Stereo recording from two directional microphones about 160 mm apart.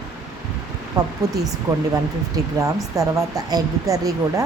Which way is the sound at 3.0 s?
20° right (ahead or behind).